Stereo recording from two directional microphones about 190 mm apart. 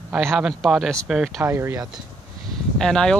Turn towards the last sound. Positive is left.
turn(degrees=5)  # may be behind; listen again after turning